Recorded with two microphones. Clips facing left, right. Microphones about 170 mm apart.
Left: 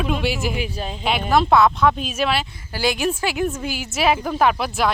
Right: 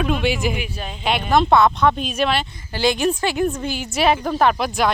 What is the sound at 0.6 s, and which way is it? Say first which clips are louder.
Speech: left 3 dB; 30° left (ahead or behind).